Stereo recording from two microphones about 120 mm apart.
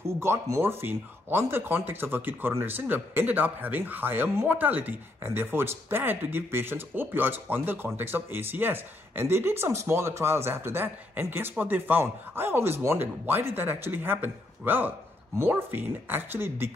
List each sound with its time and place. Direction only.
0.0 s speech: 20° right (ahead or behind)